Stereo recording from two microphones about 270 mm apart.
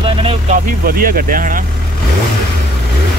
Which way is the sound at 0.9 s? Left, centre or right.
Right.